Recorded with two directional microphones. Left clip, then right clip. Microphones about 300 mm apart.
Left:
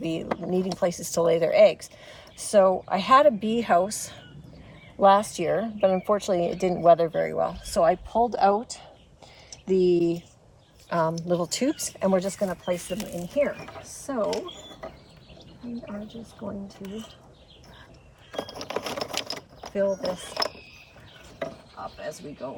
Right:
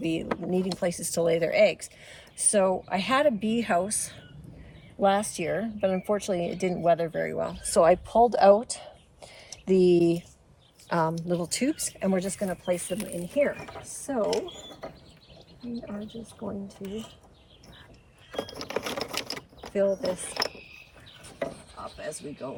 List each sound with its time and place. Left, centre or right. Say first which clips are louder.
0.0 s speech: even; centre
7.7 s speech: right 3 dB; centre
10.8 s a woman's voice: left 1 dB; centre
11.3 s speech: left 3 dB; centre
15.9 s speech: left 1 dB; centre
18.3 s a sound: left 1 dB; centre
20.1 s speech: left 1 dB; centre
21.3 s chopping: even; centre